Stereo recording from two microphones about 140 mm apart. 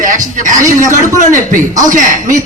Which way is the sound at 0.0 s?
70° right (ahead or behind).